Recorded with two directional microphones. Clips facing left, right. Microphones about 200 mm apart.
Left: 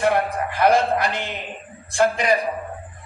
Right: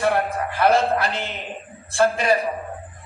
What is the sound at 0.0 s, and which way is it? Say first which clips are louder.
A man's voice: left 1 dB; 15° left (ahead or behind).